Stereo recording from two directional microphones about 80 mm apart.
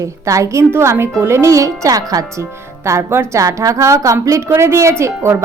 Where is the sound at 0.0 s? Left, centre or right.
Right.